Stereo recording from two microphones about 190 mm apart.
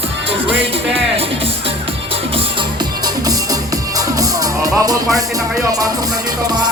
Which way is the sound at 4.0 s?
20° right (ahead or behind).